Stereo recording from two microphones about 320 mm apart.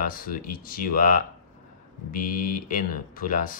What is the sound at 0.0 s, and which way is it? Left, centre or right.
Speech, left.